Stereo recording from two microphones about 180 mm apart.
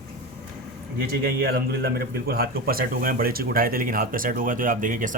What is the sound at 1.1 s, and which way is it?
A man's voice, 55° right (ahead or behind).